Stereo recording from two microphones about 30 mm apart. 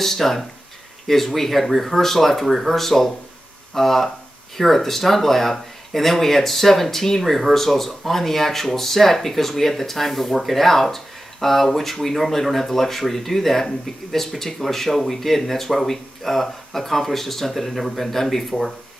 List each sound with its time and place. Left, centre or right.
0.0 s speech: centre